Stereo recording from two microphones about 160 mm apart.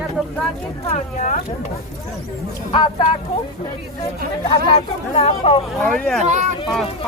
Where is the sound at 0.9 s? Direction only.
50° left (ahead or behind).